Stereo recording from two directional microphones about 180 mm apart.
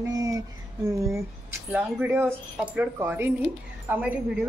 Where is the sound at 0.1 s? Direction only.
20° right (ahead or behind).